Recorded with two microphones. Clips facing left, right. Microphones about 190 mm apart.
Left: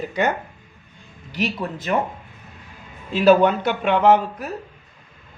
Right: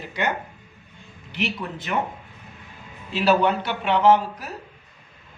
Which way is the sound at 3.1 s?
45° left (ahead or behind).